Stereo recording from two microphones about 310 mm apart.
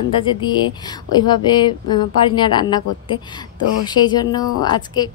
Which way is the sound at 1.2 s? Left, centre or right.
Centre.